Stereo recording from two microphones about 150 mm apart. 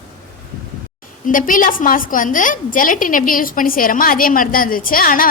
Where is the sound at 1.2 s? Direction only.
65° left (ahead or behind).